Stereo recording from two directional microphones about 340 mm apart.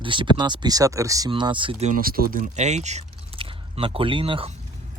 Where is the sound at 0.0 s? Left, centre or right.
Centre.